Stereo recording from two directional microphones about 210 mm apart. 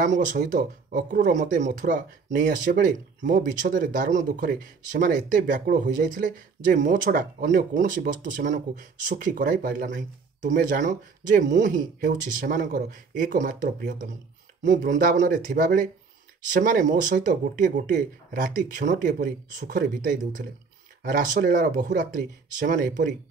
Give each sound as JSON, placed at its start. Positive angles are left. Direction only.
{"t": 0.0, "sound": "speech", "side_deg": -35}